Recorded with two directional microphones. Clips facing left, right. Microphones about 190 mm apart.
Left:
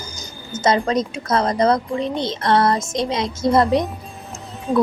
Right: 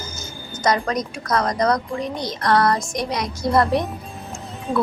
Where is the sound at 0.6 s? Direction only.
25° left (ahead or behind).